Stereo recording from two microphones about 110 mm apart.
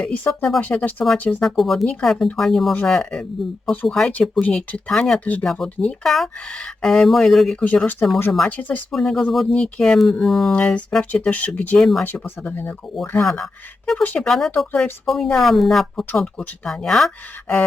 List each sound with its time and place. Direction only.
0.0 s speech: 5° left (ahead or behind)
1.5 s speech: centre (ahead or behind)
8.9 s speech: 5° left (ahead or behind)
13.0 s speech: 5° left (ahead or behind)